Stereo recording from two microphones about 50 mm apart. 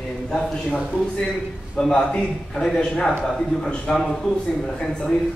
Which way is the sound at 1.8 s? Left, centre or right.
Centre.